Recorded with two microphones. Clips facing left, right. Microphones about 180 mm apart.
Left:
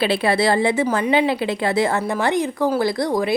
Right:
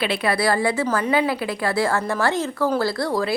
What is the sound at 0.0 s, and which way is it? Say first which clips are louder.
A woman's voice: left 3 dB; 30° left (ahead or behind).